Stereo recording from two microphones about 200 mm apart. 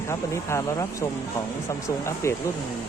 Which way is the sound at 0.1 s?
15° left (ahead or behind).